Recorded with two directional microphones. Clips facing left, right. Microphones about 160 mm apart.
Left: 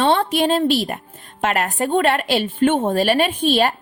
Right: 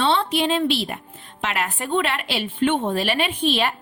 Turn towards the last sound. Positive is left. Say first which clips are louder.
# left 4 dB
turn(degrees=45)  # may be behind; listen again after turning